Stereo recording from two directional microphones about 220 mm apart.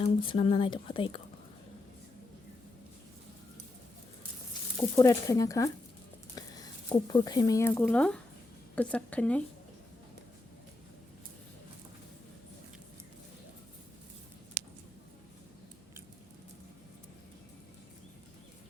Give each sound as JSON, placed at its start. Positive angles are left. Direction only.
{"t": 0.0, "sound": "a woman's voice", "side_deg": 25}
{"t": 4.9, "sound": "speech", "side_deg": 15}